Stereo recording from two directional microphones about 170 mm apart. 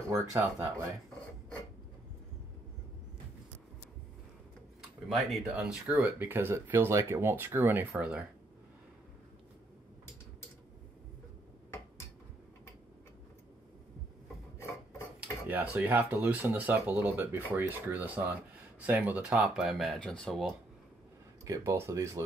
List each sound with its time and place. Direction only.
0.1 s speech: 20° right (ahead or behind)
5.5 s speech: 5° right (ahead or behind)
15.1 s speech: 10° right (ahead or behind)
21.5 s speech: 15° right (ahead or behind)